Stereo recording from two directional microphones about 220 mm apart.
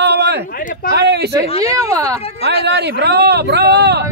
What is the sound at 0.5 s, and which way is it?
Speech, 40° left (ahead or behind).